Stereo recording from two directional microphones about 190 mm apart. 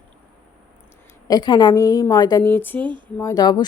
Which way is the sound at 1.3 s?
25° left (ahead or behind).